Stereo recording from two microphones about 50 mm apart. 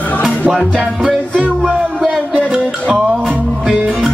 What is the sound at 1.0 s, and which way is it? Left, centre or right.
Music, centre.